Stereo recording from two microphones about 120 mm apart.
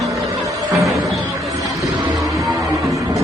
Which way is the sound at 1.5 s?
30° right (ahead or behind).